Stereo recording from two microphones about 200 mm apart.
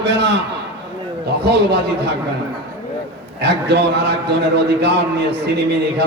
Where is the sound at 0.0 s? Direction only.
60° right (ahead or behind).